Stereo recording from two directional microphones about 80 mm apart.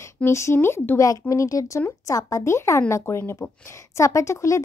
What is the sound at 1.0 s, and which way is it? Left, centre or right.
A woman's voice, left.